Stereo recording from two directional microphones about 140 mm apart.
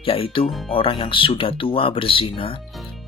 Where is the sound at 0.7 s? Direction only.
40° left (ahead or behind).